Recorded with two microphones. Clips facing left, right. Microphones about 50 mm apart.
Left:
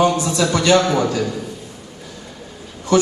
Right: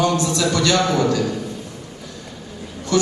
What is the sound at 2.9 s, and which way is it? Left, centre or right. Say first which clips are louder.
Speech: left 4 dB; left.